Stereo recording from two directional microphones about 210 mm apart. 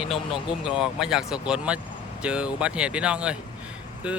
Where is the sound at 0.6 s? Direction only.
5° right (ahead or behind).